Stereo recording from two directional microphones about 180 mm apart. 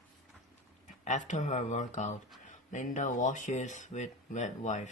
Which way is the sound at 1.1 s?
45° left (ahead or behind).